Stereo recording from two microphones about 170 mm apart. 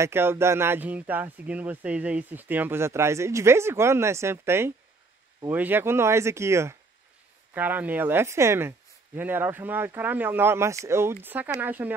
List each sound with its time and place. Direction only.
0.0 s speech: 15° right (ahead or behind)